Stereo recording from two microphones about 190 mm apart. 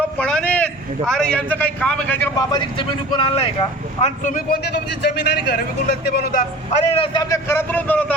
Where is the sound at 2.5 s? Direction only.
25° left (ahead or behind); by 6.4 s 55° left (ahead or behind).